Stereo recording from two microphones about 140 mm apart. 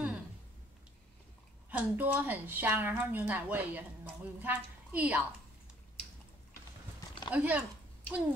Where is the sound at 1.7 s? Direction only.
10° right (ahead or behind).